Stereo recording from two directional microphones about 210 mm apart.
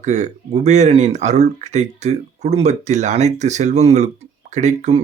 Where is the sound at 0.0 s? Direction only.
35° right (ahead or behind).